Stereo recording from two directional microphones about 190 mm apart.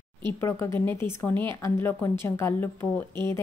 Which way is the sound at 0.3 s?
15° left (ahead or behind).